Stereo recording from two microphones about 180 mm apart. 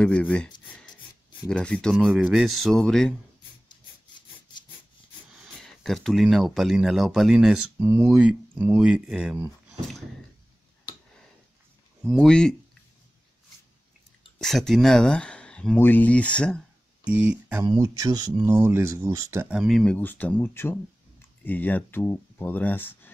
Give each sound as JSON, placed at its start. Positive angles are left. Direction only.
{"t": 0.0, "sound": "speech", "side_deg": 5}
{"t": 5.3, "sound": "speech", "side_deg": 0}
{"t": 12.2, "sound": "speech", "side_deg": 5}
{"t": 14.4, "sound": "speech", "side_deg": 0}
{"t": 17.0, "sound": "speech", "side_deg": -5}
{"t": 17.6, "sound": "speech", "side_deg": -20}
{"t": 19.5, "sound": "speech", "side_deg": 0}